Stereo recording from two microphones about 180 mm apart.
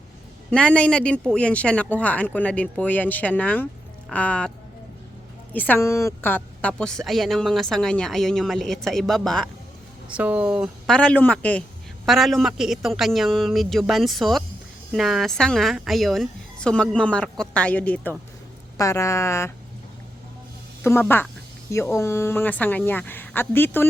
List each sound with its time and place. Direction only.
0.5 s a woman's voice: 5° left (ahead or behind)
5.5 s a woman's voice: 10° left (ahead or behind)
10.9 s a woman's voice: 5° left (ahead or behind)
20.8 s speech: 15° left (ahead or behind)